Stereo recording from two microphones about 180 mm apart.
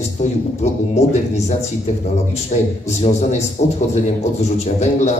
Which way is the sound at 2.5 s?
40° left (ahead or behind).